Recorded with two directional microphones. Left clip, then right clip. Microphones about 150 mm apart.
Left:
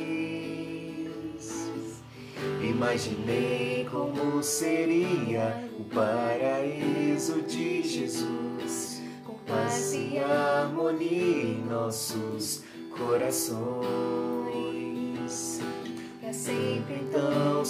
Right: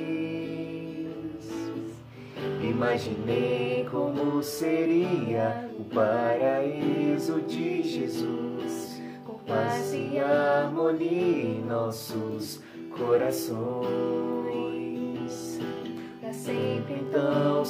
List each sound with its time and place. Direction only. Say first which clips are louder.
0.0 s music: right 1 dB; 10° left (ahead or behind)
2.6 s music: right 2 dB; 10° left (ahead or behind)
4.1 s music: right 1 dB; 15° right (ahead or behind)
4.6 s music: right 2 dB; 10° left (ahead or behind)
9.6 s music: right 1 dB; 10° left (ahead or behind)
13.1 s music: right 3 dB; 10° left (ahead or behind)
13.7 s music: right 2 dB; 10° right (ahead or behind)
14.2 s music: right 1 dB; 10° left (ahead or behind)
16.5 s music: right 2 dB; 5° left (ahead or behind)